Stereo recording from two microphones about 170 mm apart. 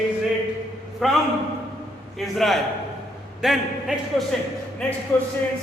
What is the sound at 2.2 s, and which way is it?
A man's voice, centre (ahead or behind).